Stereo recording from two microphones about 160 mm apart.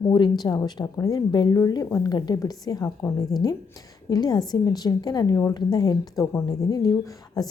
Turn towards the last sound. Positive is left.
turn(degrees=20)  # may be behind; listen again after turning